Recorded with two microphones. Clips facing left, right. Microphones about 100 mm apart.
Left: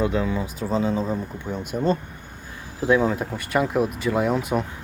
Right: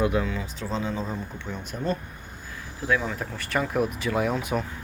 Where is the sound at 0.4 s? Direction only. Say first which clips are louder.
Left 6 dB; 10° left (ahead or behind).